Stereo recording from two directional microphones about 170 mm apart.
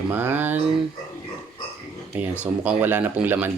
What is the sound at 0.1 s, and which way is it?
Speech, 10° right (ahead or behind).